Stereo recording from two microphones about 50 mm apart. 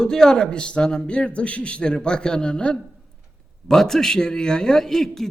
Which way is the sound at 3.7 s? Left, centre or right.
Centre.